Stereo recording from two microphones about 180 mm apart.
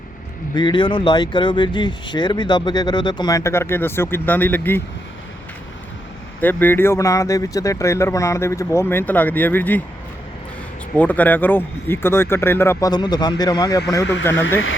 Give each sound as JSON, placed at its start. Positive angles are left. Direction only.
{"t": 0.5, "sound": "speech", "side_deg": 25}
{"t": 6.4, "sound": "speech", "side_deg": 10}
{"t": 10.9, "sound": "speech", "side_deg": 10}
{"t": 14.0, "sound": "speech", "side_deg": 80}